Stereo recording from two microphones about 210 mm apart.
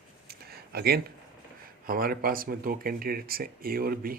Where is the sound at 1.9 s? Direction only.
45° right (ahead or behind).